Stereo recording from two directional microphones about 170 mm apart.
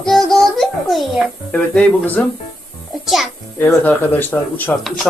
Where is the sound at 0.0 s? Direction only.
Centre (ahead or behind).